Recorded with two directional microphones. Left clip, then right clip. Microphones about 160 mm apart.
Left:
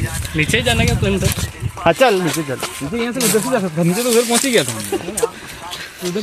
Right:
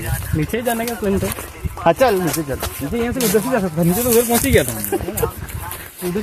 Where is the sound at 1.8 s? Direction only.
50° left (ahead or behind); by 3.4 s 30° left (ahead or behind).